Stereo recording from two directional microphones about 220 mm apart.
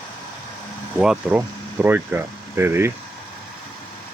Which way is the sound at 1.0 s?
5° right (ahead or behind).